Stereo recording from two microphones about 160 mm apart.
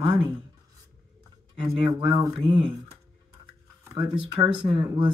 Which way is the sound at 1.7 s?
35° right (ahead or behind).